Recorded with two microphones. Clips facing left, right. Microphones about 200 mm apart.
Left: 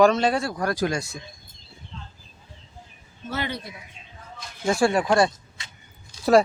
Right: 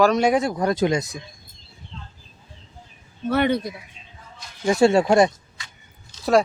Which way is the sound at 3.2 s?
60° right (ahead or behind).